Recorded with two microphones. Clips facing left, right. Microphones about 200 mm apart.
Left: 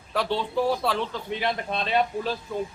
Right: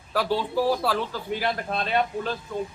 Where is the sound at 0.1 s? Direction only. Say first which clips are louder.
Right 1 dB; 5° right (ahead or behind).